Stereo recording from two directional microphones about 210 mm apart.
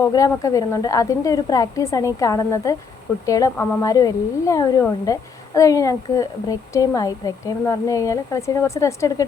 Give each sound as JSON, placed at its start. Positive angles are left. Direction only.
{"t": 0.1, "sound": "a woman's voice", "side_deg": 15}